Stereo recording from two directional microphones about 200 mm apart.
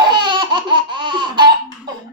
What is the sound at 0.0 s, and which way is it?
Laughter, 20° right (ahead or behind).